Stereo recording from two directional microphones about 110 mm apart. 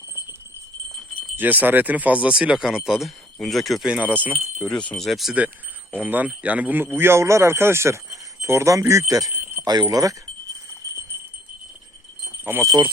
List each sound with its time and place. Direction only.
1.4 s speech: 15° right (ahead or behind)
4.6 s speech: 10° left (ahead or behind)
6.0 s speech: 15° right (ahead or behind); by 9.3 s 30° right (ahead or behind)
9.3 s a sound: 15° right (ahead or behind)
9.8 s speech: 30° right (ahead or behind)
12.5 s speech: 20° right (ahead or behind)